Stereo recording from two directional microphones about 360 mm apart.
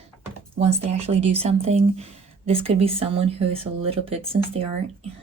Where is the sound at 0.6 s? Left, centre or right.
Centre.